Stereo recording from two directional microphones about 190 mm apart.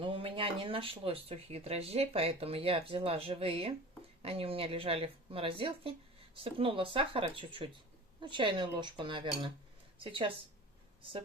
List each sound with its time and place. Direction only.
0.0 s speech: 30° right (ahead or behind)